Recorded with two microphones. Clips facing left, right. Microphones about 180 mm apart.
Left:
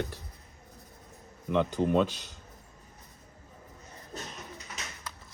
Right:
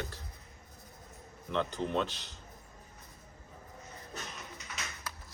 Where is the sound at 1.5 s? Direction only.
15° left (ahead or behind).